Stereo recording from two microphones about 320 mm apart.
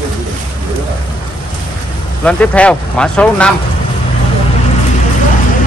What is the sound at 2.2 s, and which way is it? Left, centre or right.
A man's voice, centre.